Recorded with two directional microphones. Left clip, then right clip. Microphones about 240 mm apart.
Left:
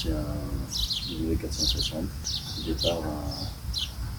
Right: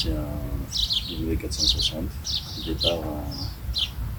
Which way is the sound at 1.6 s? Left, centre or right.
Centre.